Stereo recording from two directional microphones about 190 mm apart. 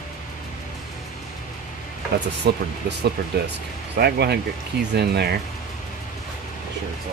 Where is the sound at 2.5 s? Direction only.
60° right (ahead or behind).